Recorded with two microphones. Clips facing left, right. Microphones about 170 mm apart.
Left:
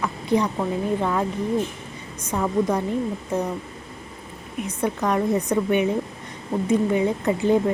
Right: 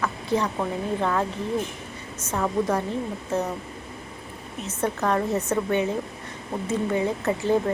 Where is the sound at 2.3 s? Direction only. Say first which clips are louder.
Left 2 dB; 10° left (ahead or behind).